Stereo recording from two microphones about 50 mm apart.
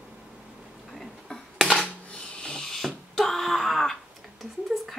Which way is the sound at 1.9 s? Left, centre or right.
Left.